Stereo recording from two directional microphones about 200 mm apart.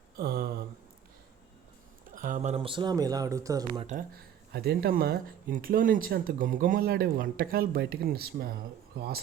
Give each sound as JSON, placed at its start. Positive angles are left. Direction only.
{"t": 0.2, "sound": "a sound", "side_deg": -50}
{"t": 2.0, "sound": "speech", "side_deg": -40}
{"t": 3.8, "sound": "speech", "side_deg": -45}